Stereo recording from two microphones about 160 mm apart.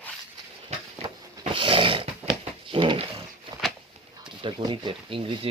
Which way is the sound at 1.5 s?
35° right (ahead or behind).